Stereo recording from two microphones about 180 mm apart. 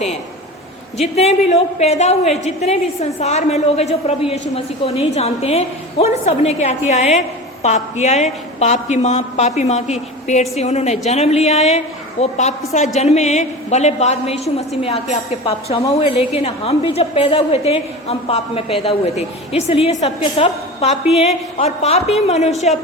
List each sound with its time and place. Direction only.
1.0 s a woman's voice: 35° left (ahead or behind)